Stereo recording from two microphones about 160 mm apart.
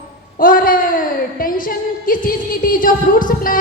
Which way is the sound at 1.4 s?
60° left (ahead or behind).